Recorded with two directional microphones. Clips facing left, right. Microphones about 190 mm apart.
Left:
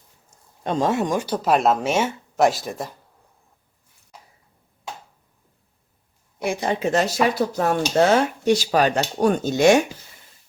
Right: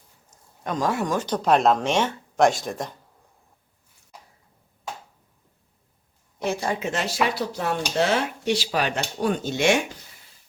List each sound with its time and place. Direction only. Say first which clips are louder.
0.3 s speech: left 4 dB; 30° left (ahead or behind); by 2.9 s 5° left (ahead or behind)
6.4 s a woman's voice: left 2 dB; 15° left (ahead or behind)
6.7 s speech: left 5 dB; 35° left (ahead or behind)